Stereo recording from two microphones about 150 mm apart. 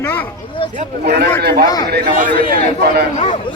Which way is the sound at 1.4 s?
90° right.